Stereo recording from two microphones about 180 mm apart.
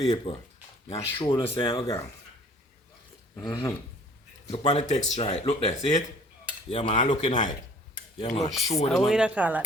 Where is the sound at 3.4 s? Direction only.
20° left (ahead or behind).